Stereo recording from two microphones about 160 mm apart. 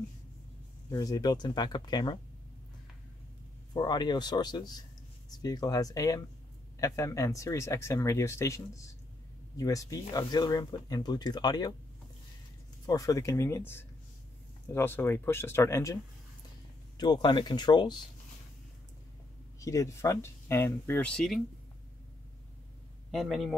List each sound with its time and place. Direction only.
0.8 s speech: 20° left (ahead or behind)
3.7 s speech: 25° left (ahead or behind)
12.8 s speech: 20° left (ahead or behind)
14.7 s speech: 15° left (ahead or behind)
19.6 s speech: 20° left (ahead or behind); by 21.4 s 5° left (ahead or behind)
23.1 s a man's voice: centre (ahead or behind)